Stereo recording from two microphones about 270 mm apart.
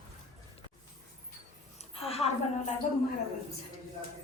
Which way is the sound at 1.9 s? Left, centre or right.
Left.